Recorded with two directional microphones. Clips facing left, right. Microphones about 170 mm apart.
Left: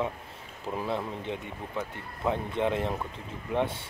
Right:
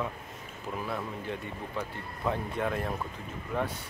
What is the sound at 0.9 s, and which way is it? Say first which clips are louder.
Speech: left 3 dB; 25° left (ahead or behind).